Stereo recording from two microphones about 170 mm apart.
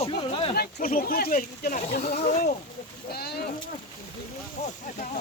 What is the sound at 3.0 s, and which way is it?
Speech, 70° left (ahead or behind).